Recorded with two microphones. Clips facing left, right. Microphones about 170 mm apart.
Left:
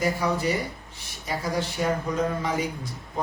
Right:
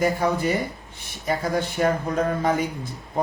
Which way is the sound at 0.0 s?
55° right (ahead or behind).